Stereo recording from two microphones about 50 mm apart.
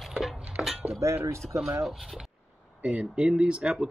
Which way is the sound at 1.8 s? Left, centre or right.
Centre.